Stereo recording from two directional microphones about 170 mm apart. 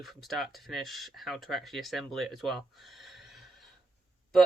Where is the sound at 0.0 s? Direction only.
Centre (ahead or behind).